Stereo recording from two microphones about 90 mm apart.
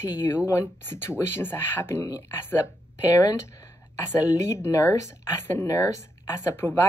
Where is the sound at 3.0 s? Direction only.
40° left (ahead or behind).